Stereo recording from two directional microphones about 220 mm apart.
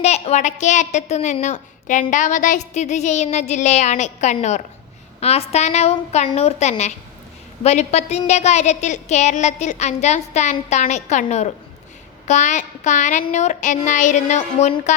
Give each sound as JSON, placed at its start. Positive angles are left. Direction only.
{"t": 0.0, "sound": "a woman's voice", "side_deg": 30}